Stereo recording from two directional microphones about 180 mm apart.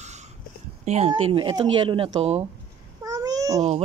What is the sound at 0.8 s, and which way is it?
Speech, 35° right (ahead or behind).